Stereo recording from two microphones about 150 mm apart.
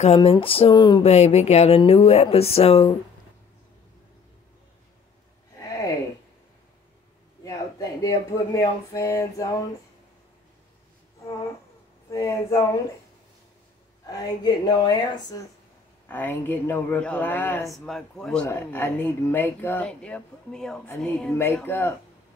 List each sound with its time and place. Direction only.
0.0 s speech: 40° left (ahead or behind)
1.0 s speech: 45° left (ahead or behind)
5.6 s a sound: 20° left (ahead or behind)
7.4 s speech: 25° left (ahead or behind)
12.1 s speech: 20° left (ahead or behind)
14.0 s speech: 25° left (ahead or behind)
16.1 s speech: 15° left (ahead or behind)
17.6 s speech: centre (ahead or behind)